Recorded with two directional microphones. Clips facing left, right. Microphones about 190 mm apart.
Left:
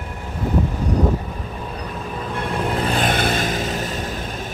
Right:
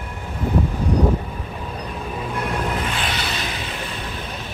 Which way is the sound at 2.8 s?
40° left (ahead or behind).